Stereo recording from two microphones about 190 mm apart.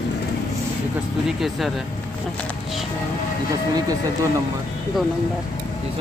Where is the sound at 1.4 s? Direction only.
Centre (ahead or behind).